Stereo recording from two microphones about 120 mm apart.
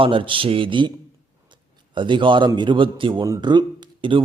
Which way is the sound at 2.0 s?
40° right (ahead or behind).